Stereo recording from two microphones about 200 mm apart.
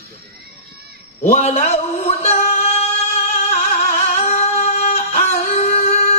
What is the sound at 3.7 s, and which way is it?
Music, 45° left (ahead or behind).